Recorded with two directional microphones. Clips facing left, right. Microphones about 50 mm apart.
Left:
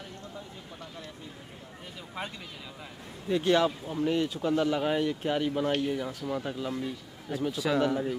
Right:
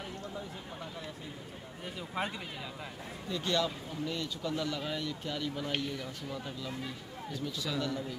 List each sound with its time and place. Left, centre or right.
2.0 s speech: centre
3.3 s speech: left